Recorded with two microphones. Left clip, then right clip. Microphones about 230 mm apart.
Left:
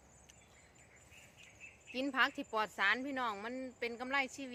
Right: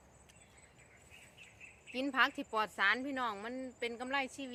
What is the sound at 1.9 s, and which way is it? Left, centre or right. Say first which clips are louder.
Speech: right 2 dB; centre.